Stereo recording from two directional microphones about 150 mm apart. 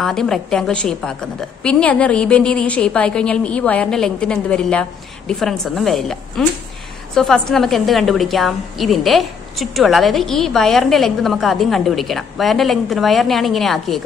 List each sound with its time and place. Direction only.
0.0 s a woman's voice: 5° left (ahead or behind)